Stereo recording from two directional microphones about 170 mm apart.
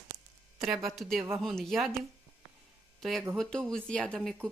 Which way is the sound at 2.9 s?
Centre (ahead or behind).